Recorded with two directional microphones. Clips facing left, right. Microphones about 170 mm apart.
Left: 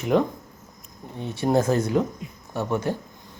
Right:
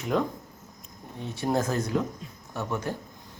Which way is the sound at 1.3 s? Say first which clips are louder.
Left 6 dB; 25° left (ahead or behind).